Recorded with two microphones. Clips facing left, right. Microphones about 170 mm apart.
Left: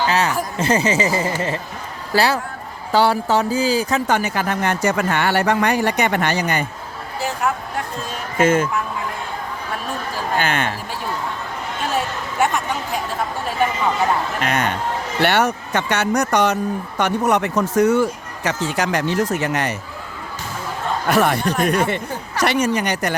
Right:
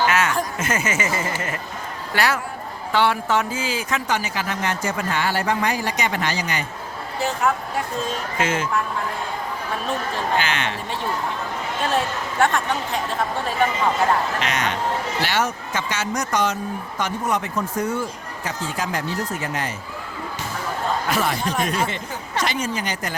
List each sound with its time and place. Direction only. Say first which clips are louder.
0.1 s a sound: left 2 dB; 35° left (ahead or behind)
0.6 s speech: left 6 dB; 35° left (ahead or behind)
4.0 s speech: left 5 dB; 55° left (ahead or behind)
8.4 s speech: left 8 dB; 50° left (ahead or behind)
10.3 s speech: left 4 dB; 50° left (ahead or behind)
11.9 s a woman's voice: left 1 dB; 5° left (ahead or behind)
14.4 s speech: left 3 dB; 55° left (ahead or behind); by 19.7 s 75° left (ahead or behind)
21.1 s speech: left 10 dB; 65° left (ahead or behind)